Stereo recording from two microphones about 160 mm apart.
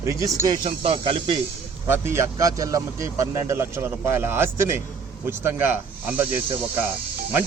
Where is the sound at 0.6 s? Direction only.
35° right (ahead or behind).